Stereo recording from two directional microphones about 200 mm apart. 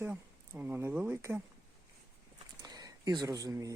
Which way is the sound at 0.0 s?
10° right (ahead or behind).